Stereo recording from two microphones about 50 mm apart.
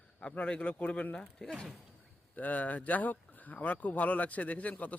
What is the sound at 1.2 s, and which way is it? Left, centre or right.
Speech, centre.